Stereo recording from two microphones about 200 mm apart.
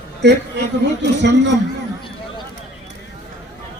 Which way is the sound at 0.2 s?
60° right (ahead or behind).